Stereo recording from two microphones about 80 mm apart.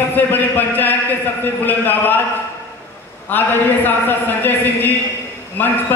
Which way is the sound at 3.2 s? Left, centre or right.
Left.